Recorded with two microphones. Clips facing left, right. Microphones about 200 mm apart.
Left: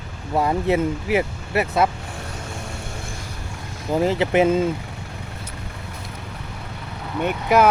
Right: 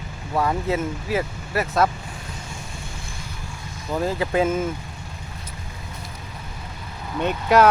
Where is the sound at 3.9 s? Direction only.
25° left (ahead or behind).